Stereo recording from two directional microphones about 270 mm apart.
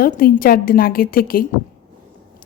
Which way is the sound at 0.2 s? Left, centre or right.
Left.